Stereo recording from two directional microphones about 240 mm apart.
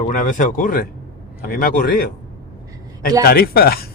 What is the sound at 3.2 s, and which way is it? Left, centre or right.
Speech, left.